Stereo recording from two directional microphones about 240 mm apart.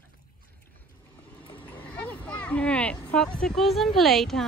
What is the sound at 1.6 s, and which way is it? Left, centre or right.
Speech, centre.